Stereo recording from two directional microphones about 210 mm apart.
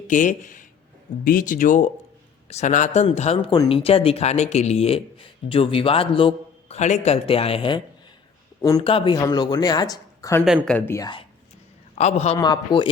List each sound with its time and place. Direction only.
0.1 s speech: 40° left (ahead or behind); by 10.4 s 15° left (ahead or behind)
10.4 s speech: 5° right (ahead or behind)
10.8 s speech: 10° left (ahead or behind)
11.9 s speech: 30° left (ahead or behind)
12.4 s speech: 20° left (ahead or behind)